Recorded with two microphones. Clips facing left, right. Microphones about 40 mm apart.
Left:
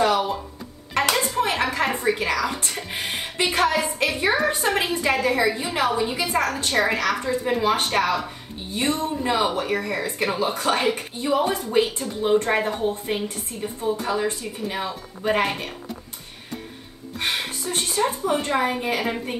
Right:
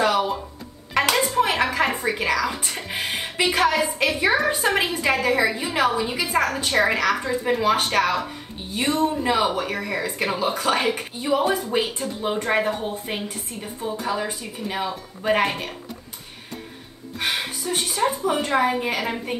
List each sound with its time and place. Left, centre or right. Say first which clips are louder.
0.0 s music: even; centre
0.9 s a sound: right 2 dB; centre
2.4 s a woman's voice: even; centre
3.1 s a woman's voice: right 2 dB; right
3.4 s a woman's voice: right 1 dB; centre
4.5 s a woman's voice: right 1 dB; centre
17.2 s a woman's voice: even; centre